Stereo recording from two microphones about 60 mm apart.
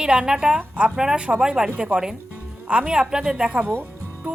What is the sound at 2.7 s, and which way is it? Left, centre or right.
Speech, centre.